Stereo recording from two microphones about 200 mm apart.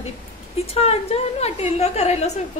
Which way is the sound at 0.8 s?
30° left (ahead or behind).